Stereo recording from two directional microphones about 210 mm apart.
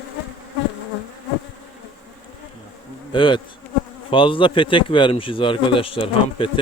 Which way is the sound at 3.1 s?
25° left (ahead or behind).